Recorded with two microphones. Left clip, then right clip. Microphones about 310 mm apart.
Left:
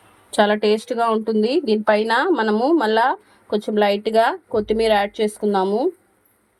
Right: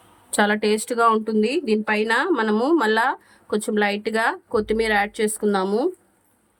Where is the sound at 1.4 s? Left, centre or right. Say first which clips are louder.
Left 3 dB; centre.